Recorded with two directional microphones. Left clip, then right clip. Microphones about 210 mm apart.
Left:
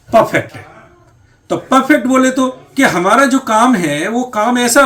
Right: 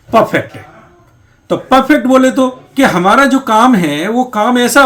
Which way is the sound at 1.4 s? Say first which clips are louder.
Right 2 dB; 30° right (ahead or behind).